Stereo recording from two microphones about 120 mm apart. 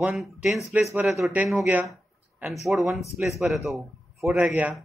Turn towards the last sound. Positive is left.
turn(degrees=-10)  # may be behind; listen again after turning